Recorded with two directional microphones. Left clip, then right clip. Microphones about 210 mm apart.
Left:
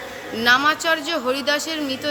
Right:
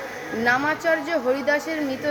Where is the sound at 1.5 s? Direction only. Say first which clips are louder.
Even; 20° left (ahead or behind).